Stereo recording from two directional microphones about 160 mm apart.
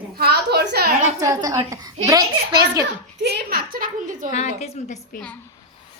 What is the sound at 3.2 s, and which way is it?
A woman's voice, 80° right.